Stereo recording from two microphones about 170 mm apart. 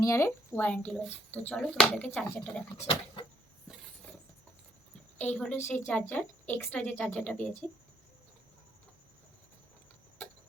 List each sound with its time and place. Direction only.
0.0 s speech: 15° left (ahead or behind)
2.7 s a sound: 30° left (ahead or behind)
5.1 s a woman's voice: 10° left (ahead or behind)